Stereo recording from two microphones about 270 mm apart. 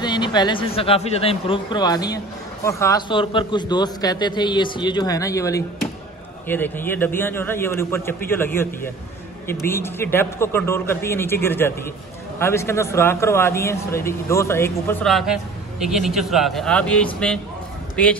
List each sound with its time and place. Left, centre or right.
0.0 s a man's voice: centre